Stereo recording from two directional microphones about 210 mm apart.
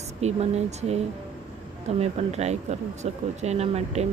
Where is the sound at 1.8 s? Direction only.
30° right (ahead or behind).